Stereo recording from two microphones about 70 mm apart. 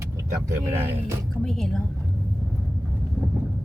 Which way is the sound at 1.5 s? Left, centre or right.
Centre.